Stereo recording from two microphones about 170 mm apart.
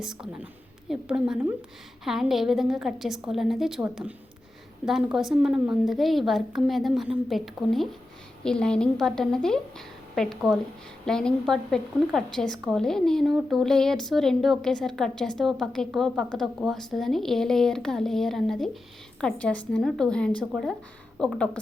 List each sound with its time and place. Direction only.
0.0 s a woman's voice: 5° right (ahead or behind)